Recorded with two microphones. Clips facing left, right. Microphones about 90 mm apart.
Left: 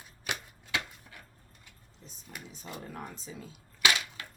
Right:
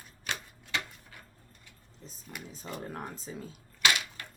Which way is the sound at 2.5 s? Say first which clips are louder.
Right 4 dB; 40° right (ahead or behind).